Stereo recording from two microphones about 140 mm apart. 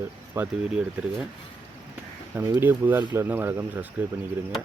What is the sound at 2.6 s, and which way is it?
Speech, 15° right (ahead or behind).